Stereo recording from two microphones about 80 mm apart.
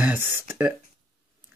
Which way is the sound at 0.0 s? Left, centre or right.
Right.